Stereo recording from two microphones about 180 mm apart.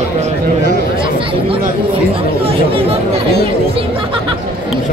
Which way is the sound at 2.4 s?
30° right (ahead or behind).